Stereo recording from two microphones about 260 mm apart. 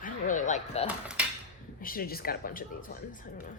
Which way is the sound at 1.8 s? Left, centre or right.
Left.